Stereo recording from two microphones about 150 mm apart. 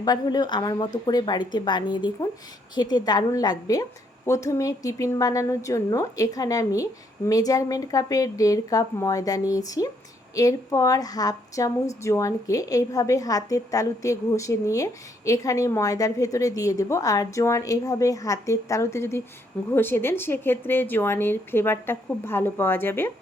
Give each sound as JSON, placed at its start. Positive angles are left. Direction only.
{"t": 0.0, "sound": "a woman's voice", "side_deg": 25}